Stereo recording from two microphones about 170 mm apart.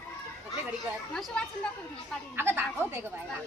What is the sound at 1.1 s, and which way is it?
Speech, 5° left (ahead or behind).